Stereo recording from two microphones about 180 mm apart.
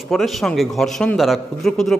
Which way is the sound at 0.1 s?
Centre (ahead or behind).